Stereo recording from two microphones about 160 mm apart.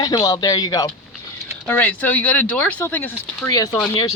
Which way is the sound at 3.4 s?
20° left (ahead or behind).